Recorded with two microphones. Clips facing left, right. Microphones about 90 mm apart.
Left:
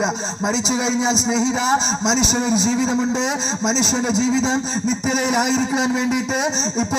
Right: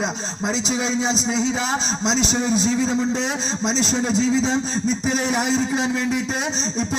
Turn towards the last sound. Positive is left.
turn(degrees=15)  # may be behind; listen again after turning